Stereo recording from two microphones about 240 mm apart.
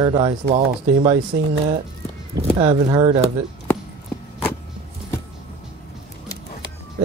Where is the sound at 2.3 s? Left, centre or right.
Right.